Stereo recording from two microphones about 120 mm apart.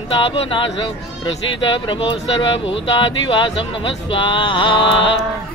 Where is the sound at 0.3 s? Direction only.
45° left (ahead or behind).